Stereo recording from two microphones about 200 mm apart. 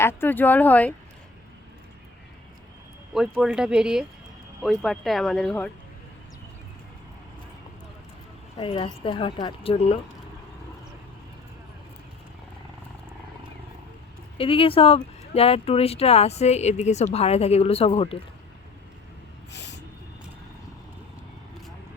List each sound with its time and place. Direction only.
0.0 s speech: 10° left (ahead or behind)
3.2 s speech: 5° right (ahead or behind)
8.5 s a woman's voice: 25° left (ahead or behind)
14.3 s speech: 25° left (ahead or behind)
19.5 s a sound: 60° left (ahead or behind)